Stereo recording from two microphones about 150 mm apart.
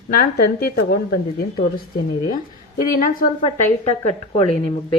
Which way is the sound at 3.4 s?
40° left (ahead or behind).